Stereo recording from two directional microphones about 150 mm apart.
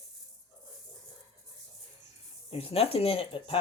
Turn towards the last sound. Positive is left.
turn(degrees=40)  # may be behind; listen again after turning